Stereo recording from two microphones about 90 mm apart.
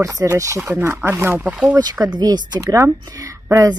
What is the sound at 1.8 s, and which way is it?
Speech, 45° right (ahead or behind).